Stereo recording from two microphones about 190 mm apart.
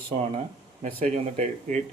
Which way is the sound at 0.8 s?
35° right (ahead or behind).